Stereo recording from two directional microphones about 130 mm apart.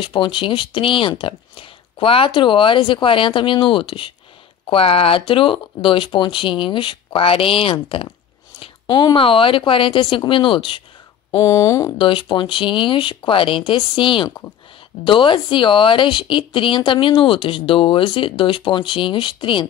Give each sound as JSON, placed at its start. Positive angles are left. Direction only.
{"t": 0.0, "sound": "a woman's voice", "side_deg": 40}
{"t": 11.4, "sound": "speech", "side_deg": 25}
{"t": 12.0, "sound": "speech", "side_deg": 40}